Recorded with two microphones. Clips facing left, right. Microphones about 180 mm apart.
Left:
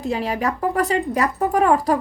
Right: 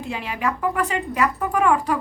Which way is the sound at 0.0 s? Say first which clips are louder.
Left 4 dB; 40° left (ahead or behind).